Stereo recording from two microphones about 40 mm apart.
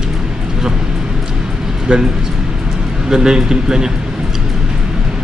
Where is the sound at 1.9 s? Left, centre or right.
Right.